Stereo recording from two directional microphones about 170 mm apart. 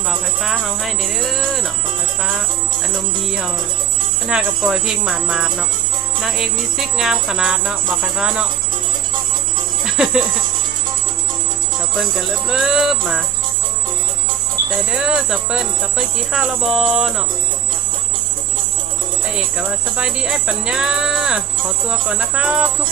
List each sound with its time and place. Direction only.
0.1 s speech: centre (ahead or behind)
4.3 s speech: 5° right (ahead or behind)
9.8 s music: 5° right (ahead or behind)
11.9 s speech: 5° right (ahead or behind)
14.8 s speech: 5° right (ahead or behind)
19.3 s speech: 5° right (ahead or behind)